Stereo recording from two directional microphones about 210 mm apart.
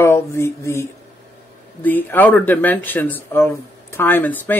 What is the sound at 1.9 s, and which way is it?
Speech, 10° left (ahead or behind).